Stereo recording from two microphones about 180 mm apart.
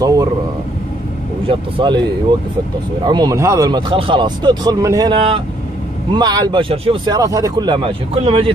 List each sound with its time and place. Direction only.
0.0 s speech: 20° right (ahead or behind)
1.5 s speech: 25° right (ahead or behind)
7.2 s speech: 20° right (ahead or behind)